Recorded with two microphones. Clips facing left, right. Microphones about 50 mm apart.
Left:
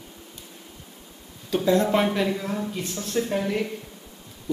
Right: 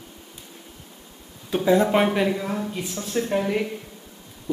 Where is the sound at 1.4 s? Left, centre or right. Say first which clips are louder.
Right 2 dB; centre.